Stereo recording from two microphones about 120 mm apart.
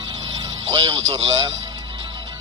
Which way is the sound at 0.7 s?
30° right (ahead or behind).